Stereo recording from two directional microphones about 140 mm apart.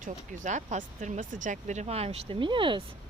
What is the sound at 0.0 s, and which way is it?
Speech, 60° right (ahead or behind).